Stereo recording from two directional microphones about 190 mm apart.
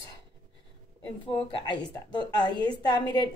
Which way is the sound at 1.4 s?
25° left (ahead or behind).